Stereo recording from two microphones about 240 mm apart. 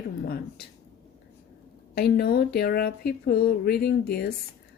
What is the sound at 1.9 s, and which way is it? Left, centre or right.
Speech, left.